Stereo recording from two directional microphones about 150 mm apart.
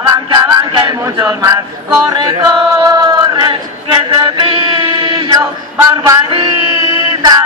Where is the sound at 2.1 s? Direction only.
25° right (ahead or behind).